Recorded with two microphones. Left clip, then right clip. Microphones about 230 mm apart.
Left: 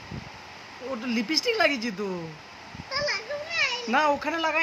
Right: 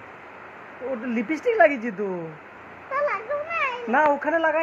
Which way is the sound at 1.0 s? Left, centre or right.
Left.